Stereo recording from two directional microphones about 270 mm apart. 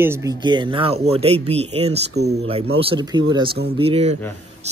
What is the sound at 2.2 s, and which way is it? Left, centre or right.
Speech, right.